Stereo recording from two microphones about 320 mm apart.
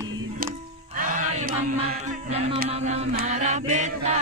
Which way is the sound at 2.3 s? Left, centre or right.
Centre.